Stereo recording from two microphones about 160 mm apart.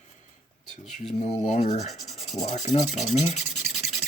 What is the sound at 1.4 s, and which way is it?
Speech, 40° left (ahead or behind).